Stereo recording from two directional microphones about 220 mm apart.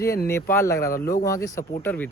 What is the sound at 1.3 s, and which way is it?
Speech, 15° left (ahead or behind).